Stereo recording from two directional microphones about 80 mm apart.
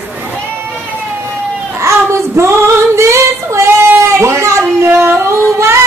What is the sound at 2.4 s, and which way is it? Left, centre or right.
Singing, right.